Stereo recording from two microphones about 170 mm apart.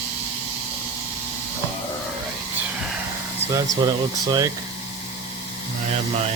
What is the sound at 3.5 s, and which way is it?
Speech, 25° right (ahead or behind).